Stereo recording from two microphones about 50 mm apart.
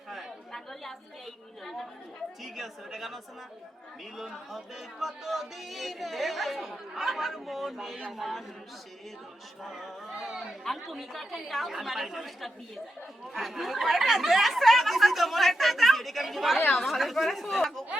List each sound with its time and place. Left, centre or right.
0.5 s chatter: centre
2.4 s speech: centre
4.2 s speech: centre
9.6 s speech: centre
10.6 s speech: centre
16.6 s speech: left
16.8 s speech: centre